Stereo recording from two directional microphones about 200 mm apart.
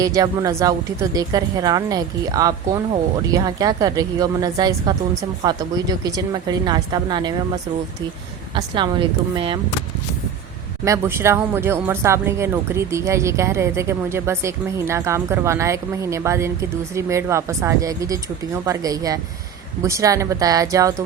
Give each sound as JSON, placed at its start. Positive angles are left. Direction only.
{"t": 0.0, "sound": "a woman's voice", "side_deg": -20}
{"t": 8.5, "sound": "a woman's voice", "side_deg": -25}
{"t": 10.8, "sound": "speech", "side_deg": -15}